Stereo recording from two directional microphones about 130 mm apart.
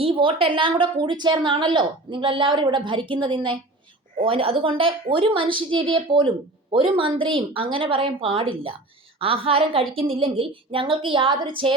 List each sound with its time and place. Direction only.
0.0 s a woman's voice: 45° right (ahead or behind)